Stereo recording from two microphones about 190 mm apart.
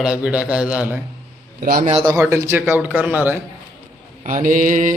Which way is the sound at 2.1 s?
15° right (ahead or behind).